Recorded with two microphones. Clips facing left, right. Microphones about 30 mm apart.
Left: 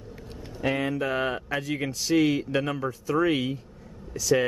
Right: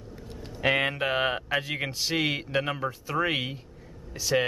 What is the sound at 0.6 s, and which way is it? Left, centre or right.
Speech, right.